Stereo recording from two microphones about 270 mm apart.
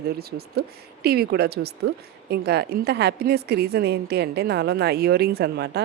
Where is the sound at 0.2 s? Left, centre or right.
Right.